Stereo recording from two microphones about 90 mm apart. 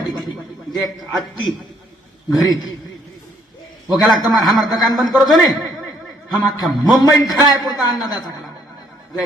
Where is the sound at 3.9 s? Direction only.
45° left (ahead or behind).